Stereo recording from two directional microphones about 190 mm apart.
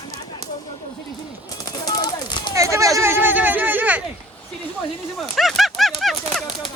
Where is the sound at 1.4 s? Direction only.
20° left (ahead or behind).